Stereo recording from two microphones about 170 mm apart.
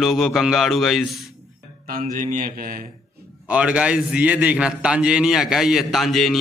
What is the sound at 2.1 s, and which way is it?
Mantra, 50° right (ahead or behind).